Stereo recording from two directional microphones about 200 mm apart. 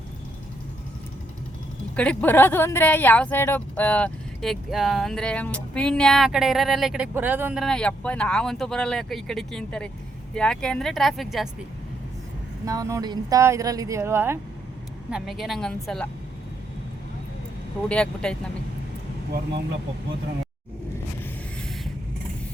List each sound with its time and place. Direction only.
2.0 s speech: 10° left (ahead or behind)
12.6 s speech: 15° right (ahead or behind)
15.1 s speech: centre (ahead or behind)
17.8 s speech: 5° left (ahead or behind)